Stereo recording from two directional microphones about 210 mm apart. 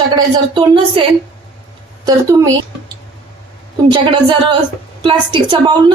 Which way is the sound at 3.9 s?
25° right (ahead or behind).